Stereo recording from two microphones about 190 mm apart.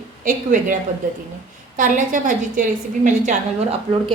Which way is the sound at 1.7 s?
40° right (ahead or behind).